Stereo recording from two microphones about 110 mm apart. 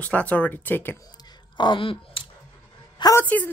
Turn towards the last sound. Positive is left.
turn(degrees=15)  # may be behind; listen again after turning